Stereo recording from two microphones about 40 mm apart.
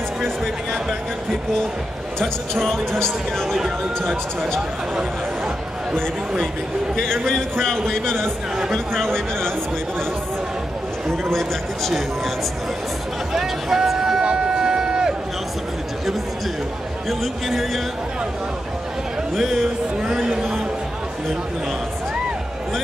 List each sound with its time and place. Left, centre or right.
2.1 s a man's voice: centre
3.5 s speech: centre
7.0 s a man's voice: centre
13.3 s a sound: centre
17.2 s speech: centre
19.3 s speech: centre